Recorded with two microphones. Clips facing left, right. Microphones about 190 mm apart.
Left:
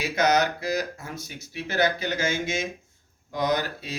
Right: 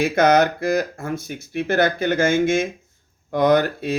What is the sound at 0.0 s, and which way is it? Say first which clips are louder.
Speech: right 7 dB; 55° right (ahead or behind).